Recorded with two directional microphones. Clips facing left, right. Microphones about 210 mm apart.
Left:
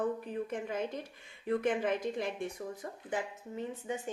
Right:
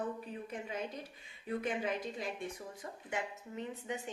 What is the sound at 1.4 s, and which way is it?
Speech, 55° left (ahead or behind).